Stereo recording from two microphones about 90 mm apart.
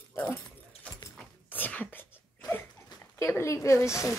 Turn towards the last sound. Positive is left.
turn(degrees=30)  # may be behind; listen again after turning